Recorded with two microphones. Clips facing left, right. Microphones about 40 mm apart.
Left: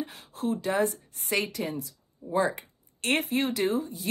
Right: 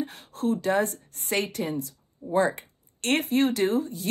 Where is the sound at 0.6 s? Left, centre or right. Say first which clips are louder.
Right 2 dB; right.